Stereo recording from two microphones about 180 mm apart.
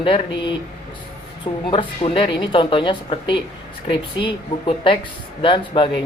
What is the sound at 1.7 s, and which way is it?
Speech, 30° left (ahead or behind).